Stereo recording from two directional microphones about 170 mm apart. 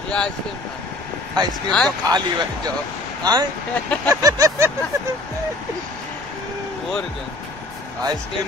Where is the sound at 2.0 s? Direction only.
25° right (ahead or behind).